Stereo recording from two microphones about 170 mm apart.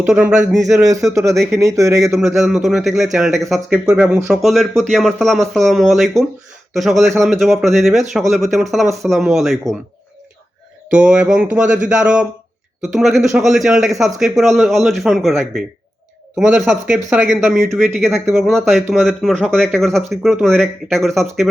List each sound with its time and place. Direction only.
0.1 s speech: 5° right (ahead or behind)
1.1 s speech: 20° right (ahead or behind)
2.1 s speech: centre (ahead or behind)
10.9 s speech: 5° right (ahead or behind)
16.4 s speech: centre (ahead or behind)